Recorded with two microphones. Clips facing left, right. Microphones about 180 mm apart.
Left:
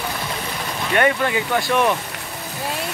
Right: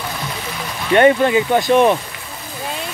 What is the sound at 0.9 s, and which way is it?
Speech, 25° right (ahead or behind).